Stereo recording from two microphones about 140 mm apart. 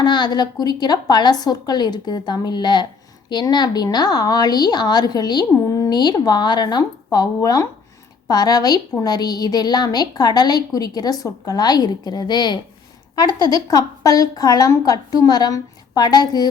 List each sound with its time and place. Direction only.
0.0 s a woman's voice: 30° left (ahead or behind)